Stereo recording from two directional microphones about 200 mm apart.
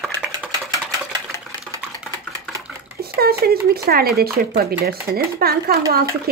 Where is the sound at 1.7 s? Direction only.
15° right (ahead or behind).